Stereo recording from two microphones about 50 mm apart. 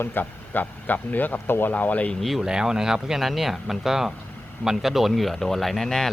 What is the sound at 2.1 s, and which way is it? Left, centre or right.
Speech, centre.